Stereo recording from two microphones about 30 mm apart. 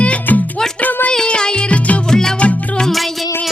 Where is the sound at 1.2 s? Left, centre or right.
Left.